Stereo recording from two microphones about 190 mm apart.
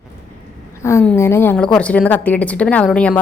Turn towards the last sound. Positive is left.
turn(degrees=5)  # may be behind; listen again after turning